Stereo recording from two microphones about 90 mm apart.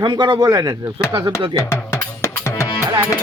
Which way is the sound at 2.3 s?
30° left (ahead or behind).